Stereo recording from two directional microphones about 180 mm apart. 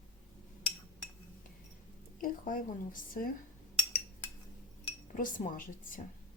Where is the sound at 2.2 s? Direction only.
50° left (ahead or behind).